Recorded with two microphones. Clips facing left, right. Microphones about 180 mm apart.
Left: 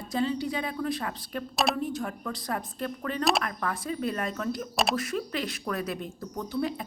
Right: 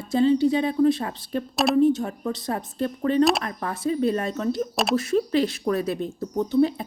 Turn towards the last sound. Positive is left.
turn(degrees=-25)  # may be behind; listen again after turning